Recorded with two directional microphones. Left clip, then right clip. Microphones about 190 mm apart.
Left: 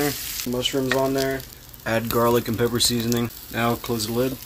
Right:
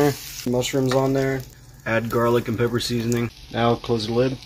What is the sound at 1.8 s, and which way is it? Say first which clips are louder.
Speech: even; 15° left (ahead or behind).